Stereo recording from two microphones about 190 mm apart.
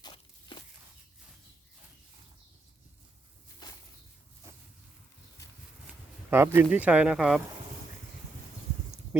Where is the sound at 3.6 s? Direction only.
20° left (ahead or behind).